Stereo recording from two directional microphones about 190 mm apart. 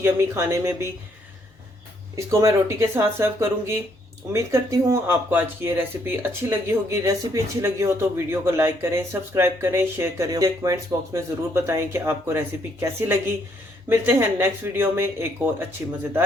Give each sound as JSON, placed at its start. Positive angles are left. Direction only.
{"t": 0.0, "sound": "speech", "side_deg": -15}
{"t": 2.1, "sound": "speech", "side_deg": -15}
{"t": 13.9, "sound": "speech", "side_deg": -15}